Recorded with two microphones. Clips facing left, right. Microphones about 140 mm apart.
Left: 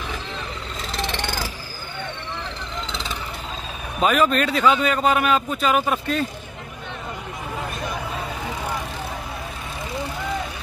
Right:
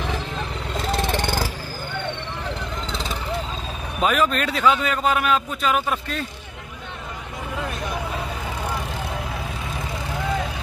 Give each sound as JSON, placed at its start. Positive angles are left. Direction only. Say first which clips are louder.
{"t": 0.9, "sound": "vehicle", "louder": "right 3 dB", "side_deg": -50}
{"t": 4.0, "sound": "a man's voice", "louder": "left 2 dB", "side_deg": 0}